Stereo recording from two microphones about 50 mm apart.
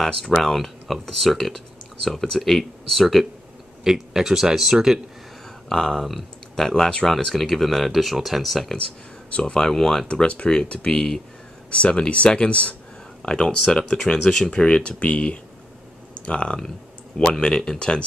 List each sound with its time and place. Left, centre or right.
0.0 s speech: centre
3.8 s speech: centre
5.7 s speech: centre
9.3 s speech: centre
10.0 s speech: left; by 14.5 s centre
14.5 s speech: left